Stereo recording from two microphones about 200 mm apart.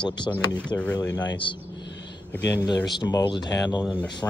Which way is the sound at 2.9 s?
20° left (ahead or behind).